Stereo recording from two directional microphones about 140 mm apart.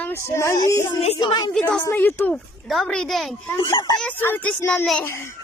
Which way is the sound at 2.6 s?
Centre (ahead or behind).